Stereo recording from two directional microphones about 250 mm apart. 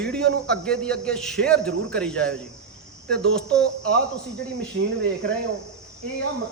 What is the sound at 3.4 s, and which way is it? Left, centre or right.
Speech, centre.